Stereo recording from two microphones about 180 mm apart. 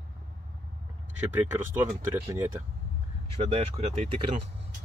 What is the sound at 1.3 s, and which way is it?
Speech, 10° right (ahead or behind).